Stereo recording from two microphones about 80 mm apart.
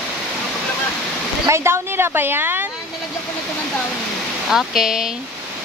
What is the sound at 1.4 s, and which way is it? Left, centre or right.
Speech, right.